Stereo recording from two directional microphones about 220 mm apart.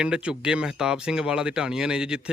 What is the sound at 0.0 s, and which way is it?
Speech, 5° right (ahead or behind).